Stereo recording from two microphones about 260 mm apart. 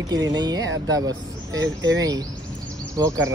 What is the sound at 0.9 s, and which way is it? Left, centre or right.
Speech, centre.